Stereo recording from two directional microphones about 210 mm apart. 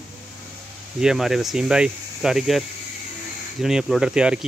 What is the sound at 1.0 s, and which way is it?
Speech, centre (ahead or behind).